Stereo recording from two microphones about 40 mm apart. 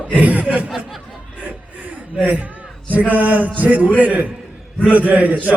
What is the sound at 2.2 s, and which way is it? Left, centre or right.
Speech, right.